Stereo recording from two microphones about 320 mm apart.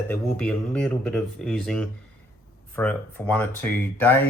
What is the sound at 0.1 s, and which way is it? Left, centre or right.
Speech, centre.